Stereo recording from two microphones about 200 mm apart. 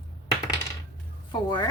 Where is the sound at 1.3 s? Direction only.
20° left (ahead or behind).